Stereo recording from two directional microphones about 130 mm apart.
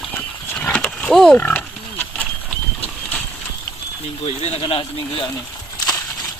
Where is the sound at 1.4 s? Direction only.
15° left (ahead or behind).